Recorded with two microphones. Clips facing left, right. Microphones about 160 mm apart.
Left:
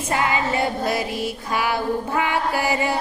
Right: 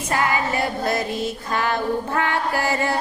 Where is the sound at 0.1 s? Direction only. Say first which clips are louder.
Even; 20° left (ahead or behind).